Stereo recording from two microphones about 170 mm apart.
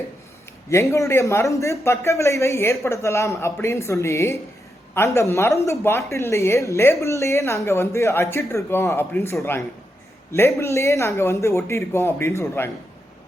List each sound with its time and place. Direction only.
0.7 s speech: 15° left (ahead or behind)